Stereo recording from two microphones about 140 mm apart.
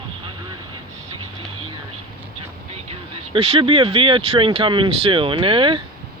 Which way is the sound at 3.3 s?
40° right (ahead or behind).